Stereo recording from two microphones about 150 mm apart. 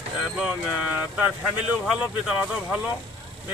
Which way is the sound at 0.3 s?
5° right (ahead or behind).